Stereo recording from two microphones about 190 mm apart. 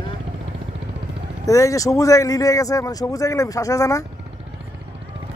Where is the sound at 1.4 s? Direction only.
15° left (ahead or behind).